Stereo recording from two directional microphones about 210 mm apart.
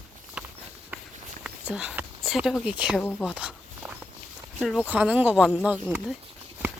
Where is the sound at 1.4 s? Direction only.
5° right (ahead or behind).